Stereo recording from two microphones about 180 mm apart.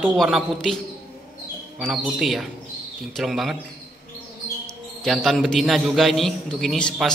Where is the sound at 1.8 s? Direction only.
Centre (ahead or behind).